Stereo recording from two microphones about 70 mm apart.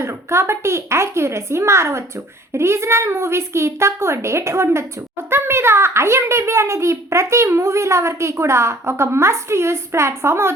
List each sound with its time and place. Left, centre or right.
0.0 s a child's voice: right